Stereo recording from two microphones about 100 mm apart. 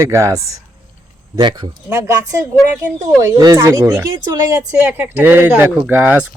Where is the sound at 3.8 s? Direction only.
25° right (ahead or behind).